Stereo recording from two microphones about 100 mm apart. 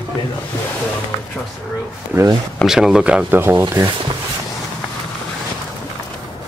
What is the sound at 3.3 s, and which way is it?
Speech, 20° right (ahead or behind).